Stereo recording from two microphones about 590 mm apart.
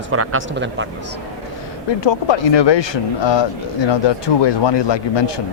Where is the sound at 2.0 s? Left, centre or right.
Left.